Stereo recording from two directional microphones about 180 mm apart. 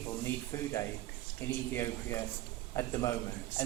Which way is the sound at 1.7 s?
15° left (ahead or behind).